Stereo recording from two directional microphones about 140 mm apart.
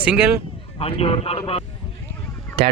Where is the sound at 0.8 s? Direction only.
45° left (ahead or behind).